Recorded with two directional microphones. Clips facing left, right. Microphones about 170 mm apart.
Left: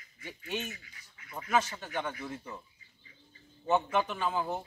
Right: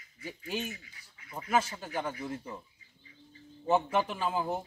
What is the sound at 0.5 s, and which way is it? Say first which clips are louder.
Speech: even; 30° right (ahead or behind).